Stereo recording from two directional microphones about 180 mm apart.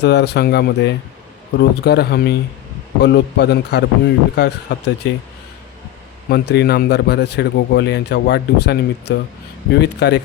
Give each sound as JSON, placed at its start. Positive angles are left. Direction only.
{"t": 0.0, "sound": "a man's voice", "side_deg": 70}
{"t": 6.2, "sound": "a man's voice", "side_deg": 65}